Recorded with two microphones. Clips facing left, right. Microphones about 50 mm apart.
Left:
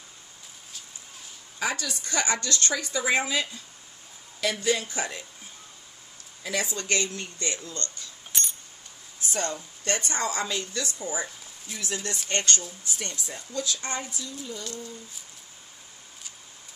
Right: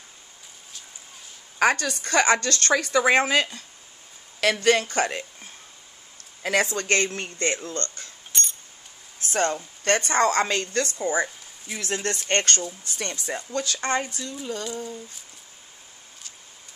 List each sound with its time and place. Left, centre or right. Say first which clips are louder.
1.6 s a woman's voice: right 8 dB; right
6.4 s a woman's voice: right 7 dB; right
8.3 s coin: right 3 dB; centre
9.2 s a woman's voice: right 6 dB; right